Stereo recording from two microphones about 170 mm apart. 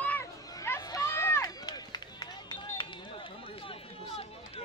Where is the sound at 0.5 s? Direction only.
20° left (ahead or behind); by 4.6 s 35° left (ahead or behind).